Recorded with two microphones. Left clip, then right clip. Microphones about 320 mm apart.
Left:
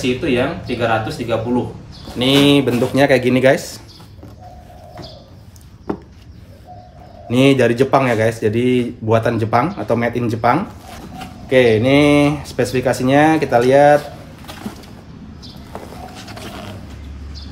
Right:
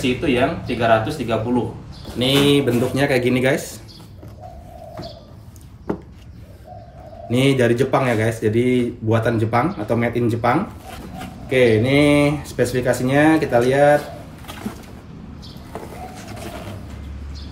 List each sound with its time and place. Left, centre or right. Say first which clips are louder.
0.0 s speech: left 1 dB; centre
2.9 s speech: left 5 dB; centre
5.9 s a sound: left 1 dB; centre
7.2 s speech: left 4 dB; centre
15.9 s boat: left 1 dB; centre